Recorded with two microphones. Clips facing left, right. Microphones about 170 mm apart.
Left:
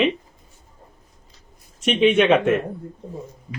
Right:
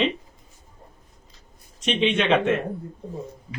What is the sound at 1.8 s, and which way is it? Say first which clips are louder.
Speech: left 6 dB; 10° left (ahead or behind).